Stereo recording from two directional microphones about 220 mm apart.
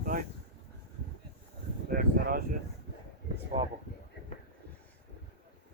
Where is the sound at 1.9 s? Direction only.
40° right (ahead or behind).